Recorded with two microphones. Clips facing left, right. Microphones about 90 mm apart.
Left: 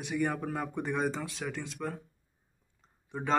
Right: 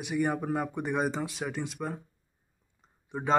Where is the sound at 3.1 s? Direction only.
10° right (ahead or behind).